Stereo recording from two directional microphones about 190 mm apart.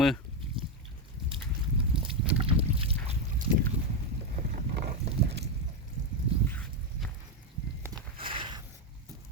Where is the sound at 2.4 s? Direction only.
30° right (ahead or behind).